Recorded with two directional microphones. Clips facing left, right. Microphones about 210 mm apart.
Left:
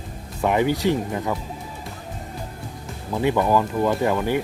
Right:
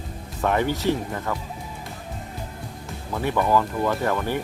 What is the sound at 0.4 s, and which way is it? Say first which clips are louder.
Speech: left 2 dB; 15° left (ahead or behind).